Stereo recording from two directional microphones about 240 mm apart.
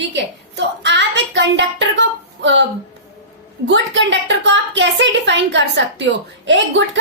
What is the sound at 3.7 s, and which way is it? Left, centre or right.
A woman's voice, right.